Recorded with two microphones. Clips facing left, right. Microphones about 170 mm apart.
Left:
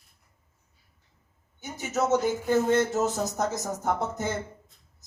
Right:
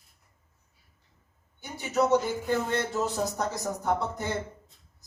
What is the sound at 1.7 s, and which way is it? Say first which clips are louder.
Speech: right 1 dB; 45° left (ahead or behind).